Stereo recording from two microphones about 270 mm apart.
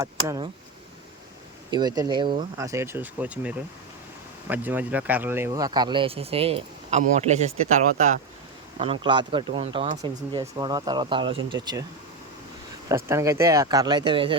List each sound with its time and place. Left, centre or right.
0.0 s speech: centre
1.7 s speech: centre
8.8 s speech: centre
13.1 s speech: centre